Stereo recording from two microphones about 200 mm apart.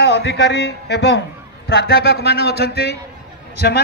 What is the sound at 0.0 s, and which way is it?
Speech, 60° left (ahead or behind).